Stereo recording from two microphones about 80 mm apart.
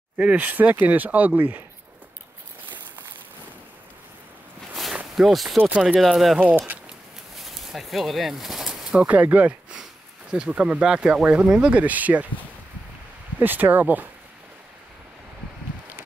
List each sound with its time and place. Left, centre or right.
0.2 s speech: centre
5.1 s speech: centre
5.6 s speech: centre
5.9 s speech: centre
7.3 s bird: centre
9.0 s speech: centre
13.4 s speech: right